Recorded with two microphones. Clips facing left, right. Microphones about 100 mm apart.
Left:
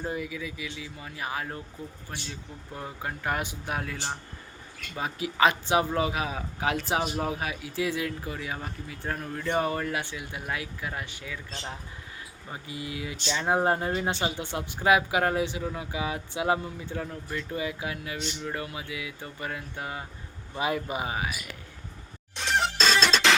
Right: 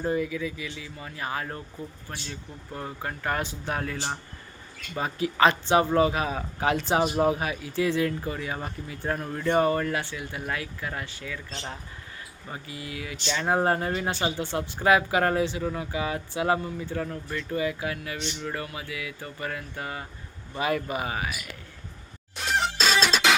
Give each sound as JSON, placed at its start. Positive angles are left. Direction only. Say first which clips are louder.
{"t": 0.0, "sound": "speech", "louder": "right 6 dB", "side_deg": 10}
{"t": 2.7, "sound": "speech", "louder": "right 2 dB", "side_deg": 10}
{"t": 12.5, "sound": "speech", "louder": "left 1 dB", "side_deg": 20}
{"t": 22.4, "sound": "music", "louder": "even", "side_deg": -5}